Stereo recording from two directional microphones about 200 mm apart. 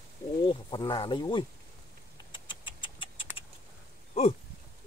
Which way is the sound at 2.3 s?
25° left (ahead or behind).